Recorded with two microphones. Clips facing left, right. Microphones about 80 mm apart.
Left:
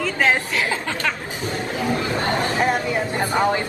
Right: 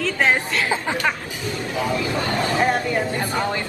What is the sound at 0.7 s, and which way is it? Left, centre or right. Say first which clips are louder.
Chatter: right 2 dB; centre.